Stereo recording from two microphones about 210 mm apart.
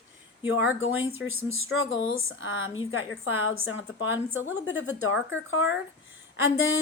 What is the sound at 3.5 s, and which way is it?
Speech, 60° left (ahead or behind).